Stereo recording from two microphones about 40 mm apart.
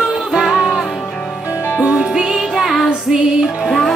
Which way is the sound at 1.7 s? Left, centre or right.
Right.